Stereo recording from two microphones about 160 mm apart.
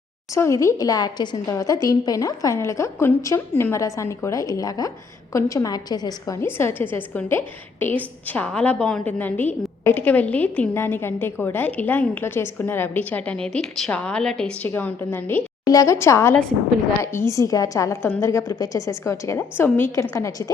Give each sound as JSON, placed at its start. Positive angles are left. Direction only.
{"t": 0.3, "sound": "a woman's voice", "side_deg": 20}
{"t": 16.3, "sound": "a woman's voice", "side_deg": 5}
{"t": 17.0, "sound": "a woman's voice", "side_deg": 15}